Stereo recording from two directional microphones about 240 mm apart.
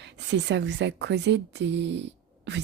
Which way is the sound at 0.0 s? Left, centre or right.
Right.